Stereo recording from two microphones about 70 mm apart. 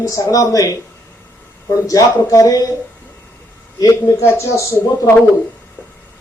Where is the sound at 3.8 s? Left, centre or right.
Left.